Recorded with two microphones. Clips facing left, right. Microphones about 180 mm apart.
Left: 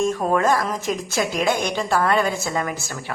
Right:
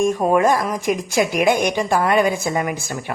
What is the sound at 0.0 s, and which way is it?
A woman's voice, 15° right (ahead or behind).